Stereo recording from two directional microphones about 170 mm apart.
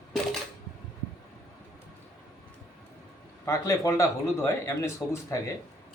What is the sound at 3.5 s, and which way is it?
Speech, 20° left (ahead or behind).